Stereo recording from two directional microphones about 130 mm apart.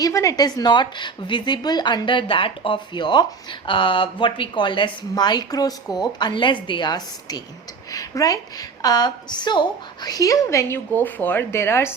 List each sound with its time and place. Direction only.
0.0 s a woman's voice: 25° left (ahead or behind)